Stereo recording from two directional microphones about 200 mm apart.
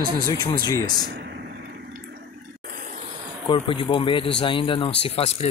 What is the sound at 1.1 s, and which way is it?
Vehicle, 55° right (ahead or behind).